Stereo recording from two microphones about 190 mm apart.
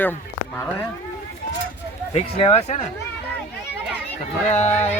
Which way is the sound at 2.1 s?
35° left (ahead or behind).